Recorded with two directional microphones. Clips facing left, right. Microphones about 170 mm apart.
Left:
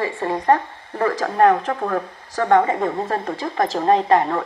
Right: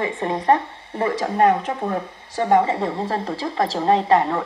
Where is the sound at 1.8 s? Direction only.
20° right (ahead or behind).